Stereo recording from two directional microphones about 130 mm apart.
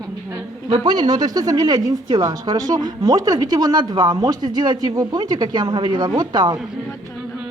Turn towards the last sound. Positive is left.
turn(degrees=-35)  # may be behind; listen again after turning